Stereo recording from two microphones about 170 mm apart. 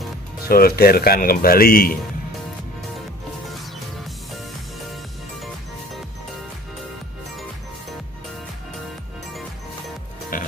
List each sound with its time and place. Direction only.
0.5 s speech: 60° left (ahead or behind)
10.3 s music: 55° left (ahead or behind)